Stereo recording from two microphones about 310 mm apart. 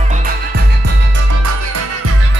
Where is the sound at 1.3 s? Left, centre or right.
Right.